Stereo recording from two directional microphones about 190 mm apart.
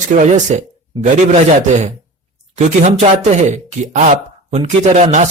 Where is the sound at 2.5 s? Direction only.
40° right (ahead or behind).